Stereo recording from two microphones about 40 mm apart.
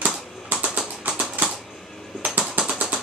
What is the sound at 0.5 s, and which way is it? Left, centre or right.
Typing, right.